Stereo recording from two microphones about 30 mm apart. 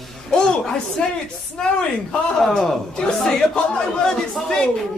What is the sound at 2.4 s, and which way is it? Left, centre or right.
Speech, centre.